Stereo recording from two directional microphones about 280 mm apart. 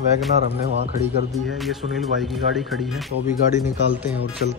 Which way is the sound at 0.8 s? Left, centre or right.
Right.